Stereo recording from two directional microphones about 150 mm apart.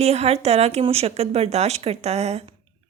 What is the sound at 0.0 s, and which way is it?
A woman's voice, 45° right (ahead or behind).